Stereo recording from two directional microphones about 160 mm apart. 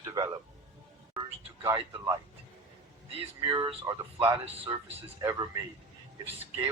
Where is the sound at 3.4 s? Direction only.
30° right (ahead or behind).